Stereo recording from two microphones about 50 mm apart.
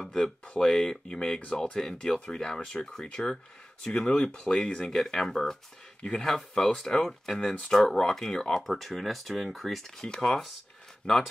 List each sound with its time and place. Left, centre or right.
0.0 s speech: centre
4.9 s speech: centre
11.0 s speech: left